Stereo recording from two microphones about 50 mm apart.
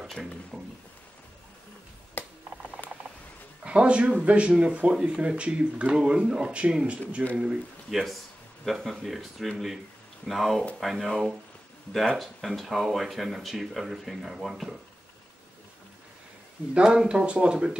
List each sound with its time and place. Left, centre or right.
0.1 s speech: centre
2.2 s a sound: left
3.6 s speech: right
7.9 s speech: centre
16.7 s speech: centre